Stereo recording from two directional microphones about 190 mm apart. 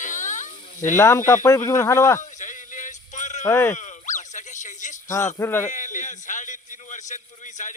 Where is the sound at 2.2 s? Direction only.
40° left (ahead or behind).